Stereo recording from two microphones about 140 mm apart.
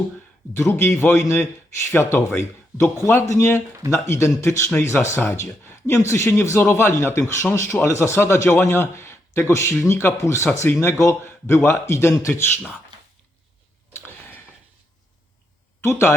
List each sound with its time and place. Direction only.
0.5 s a man's voice: 20° left (ahead or behind)
13.9 s a sound: 15° left (ahead or behind)
15.8 s a man's voice: 20° left (ahead or behind)